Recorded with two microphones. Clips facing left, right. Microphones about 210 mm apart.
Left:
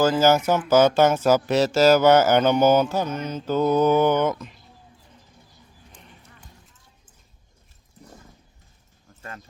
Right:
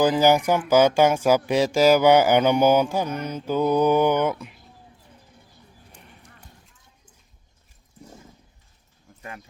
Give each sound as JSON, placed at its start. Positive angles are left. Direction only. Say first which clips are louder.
{"t": 0.0, "sound": "speech", "louder": "even", "side_deg": -15}